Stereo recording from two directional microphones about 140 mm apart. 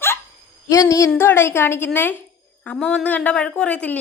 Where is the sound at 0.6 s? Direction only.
25° left (ahead or behind).